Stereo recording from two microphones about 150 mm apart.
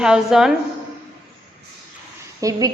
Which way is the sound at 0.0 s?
5° right (ahead or behind).